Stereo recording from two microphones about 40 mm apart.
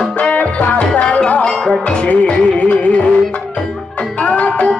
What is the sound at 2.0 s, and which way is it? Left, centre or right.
Music, left.